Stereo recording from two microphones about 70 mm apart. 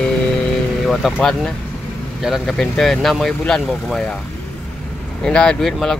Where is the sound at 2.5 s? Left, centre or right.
Centre.